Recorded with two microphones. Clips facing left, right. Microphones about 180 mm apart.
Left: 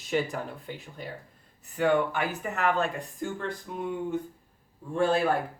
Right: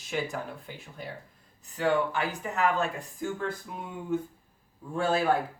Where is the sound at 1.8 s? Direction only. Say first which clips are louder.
Left 2 dB; 55° left (ahead or behind).